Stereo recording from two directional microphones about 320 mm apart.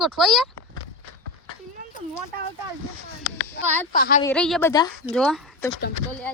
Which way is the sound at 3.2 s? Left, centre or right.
Right.